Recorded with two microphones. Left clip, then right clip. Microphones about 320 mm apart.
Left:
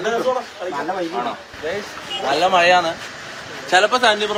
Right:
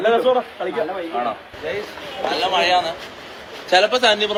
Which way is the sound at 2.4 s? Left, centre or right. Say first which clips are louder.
Left 3 dB; left.